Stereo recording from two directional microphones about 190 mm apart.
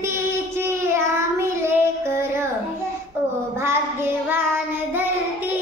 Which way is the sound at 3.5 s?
10° right (ahead or behind).